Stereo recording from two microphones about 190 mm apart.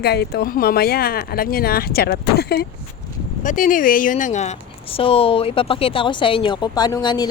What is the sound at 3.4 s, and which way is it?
Speech, 45° left (ahead or behind).